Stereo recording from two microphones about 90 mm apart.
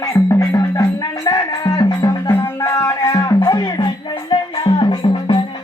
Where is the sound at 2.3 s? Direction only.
25° left (ahead or behind).